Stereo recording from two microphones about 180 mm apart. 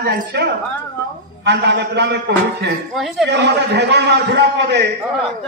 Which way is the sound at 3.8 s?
70° right (ahead or behind).